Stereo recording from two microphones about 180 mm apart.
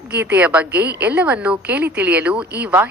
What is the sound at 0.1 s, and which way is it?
Speech, 70° right (ahead or behind).